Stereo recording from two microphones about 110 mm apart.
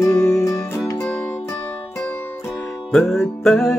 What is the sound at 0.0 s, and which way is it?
Music, 25° left (ahead or behind).